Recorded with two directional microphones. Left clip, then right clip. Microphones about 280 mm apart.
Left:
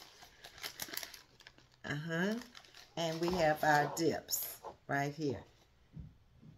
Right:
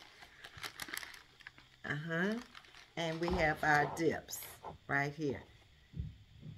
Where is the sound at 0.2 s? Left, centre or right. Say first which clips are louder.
Right 1 dB; centre.